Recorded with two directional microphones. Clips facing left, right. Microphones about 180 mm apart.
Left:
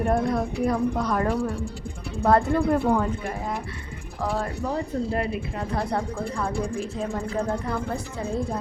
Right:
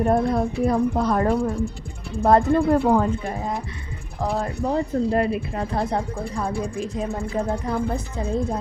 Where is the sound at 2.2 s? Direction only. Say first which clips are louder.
Right 3 dB; 20° right (ahead or behind).